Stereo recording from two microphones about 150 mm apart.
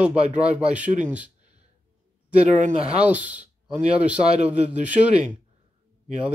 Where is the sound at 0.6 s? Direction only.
10° right (ahead or behind).